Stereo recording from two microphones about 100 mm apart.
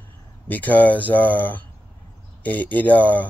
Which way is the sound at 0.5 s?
15° left (ahead or behind).